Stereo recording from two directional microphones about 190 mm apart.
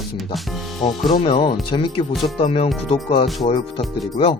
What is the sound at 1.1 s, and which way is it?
Speech, 30° left (ahead or behind).